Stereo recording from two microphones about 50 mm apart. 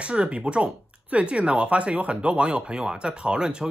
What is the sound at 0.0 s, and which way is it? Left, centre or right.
Speech, right.